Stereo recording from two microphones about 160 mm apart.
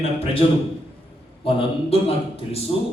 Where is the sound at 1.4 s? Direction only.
35° left (ahead or behind).